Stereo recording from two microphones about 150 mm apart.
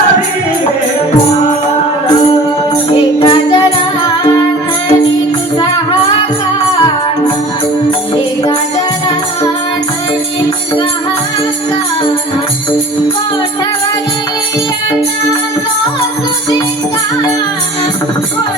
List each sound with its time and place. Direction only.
3.2 s music: 35° left (ahead or behind)